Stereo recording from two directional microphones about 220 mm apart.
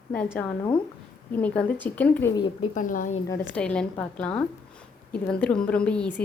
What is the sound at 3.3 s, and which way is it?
A woman's voice, 5° left (ahead or behind).